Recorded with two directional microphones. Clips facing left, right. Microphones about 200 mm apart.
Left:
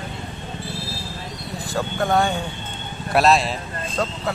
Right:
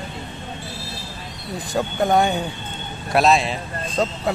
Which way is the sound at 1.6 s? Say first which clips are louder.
Right 2 dB; 20° right (ahead or behind).